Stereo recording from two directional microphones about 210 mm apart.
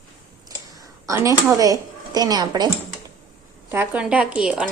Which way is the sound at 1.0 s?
15° right (ahead or behind).